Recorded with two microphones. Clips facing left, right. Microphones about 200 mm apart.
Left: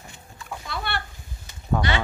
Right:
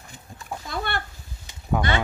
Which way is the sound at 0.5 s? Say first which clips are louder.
Right 2 dB; 45° right (ahead or behind).